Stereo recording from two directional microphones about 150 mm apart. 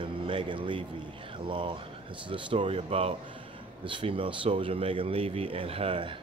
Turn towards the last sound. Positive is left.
turn(degrees=-35)  # may be behind; listen again after turning